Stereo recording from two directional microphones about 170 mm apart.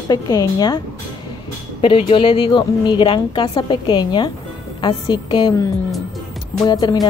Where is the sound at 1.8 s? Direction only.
30° left (ahead or behind).